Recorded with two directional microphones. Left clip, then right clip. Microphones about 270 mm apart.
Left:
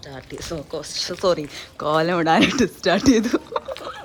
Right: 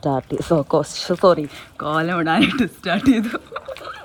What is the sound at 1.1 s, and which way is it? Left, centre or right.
Speech, centre.